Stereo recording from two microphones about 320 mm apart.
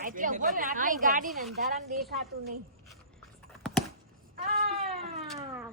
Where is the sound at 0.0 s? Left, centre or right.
Right.